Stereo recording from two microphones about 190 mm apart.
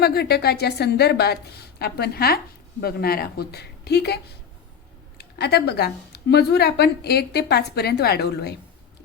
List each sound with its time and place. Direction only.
0.0 s a woman's voice: 55° left (ahead or behind)